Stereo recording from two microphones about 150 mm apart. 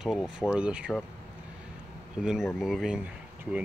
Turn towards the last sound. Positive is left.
turn(degrees=-5)  # may be behind; listen again after turning